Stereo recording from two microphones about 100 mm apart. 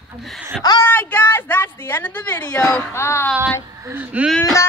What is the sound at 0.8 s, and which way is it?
A woman's voice, 20° left (ahead or behind).